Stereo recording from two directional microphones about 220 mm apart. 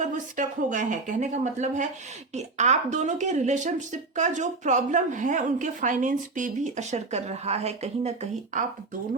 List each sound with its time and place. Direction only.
0.0 s speech: 35° right (ahead or behind)